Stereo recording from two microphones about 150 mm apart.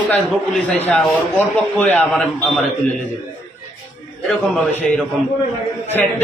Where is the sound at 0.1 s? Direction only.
5° left (ahead or behind).